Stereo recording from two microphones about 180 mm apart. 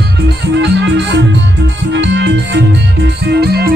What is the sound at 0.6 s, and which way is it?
Music, 75° right (ahead or behind).